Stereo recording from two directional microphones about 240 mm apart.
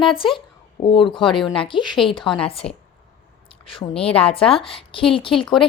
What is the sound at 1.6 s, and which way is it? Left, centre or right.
Speech, centre.